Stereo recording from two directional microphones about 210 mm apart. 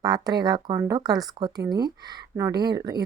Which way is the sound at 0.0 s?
20° right (ahead or behind).